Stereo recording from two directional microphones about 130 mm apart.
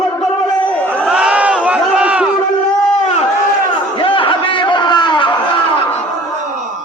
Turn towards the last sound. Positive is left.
turn(degrees=40)  # may be behind; listen again after turning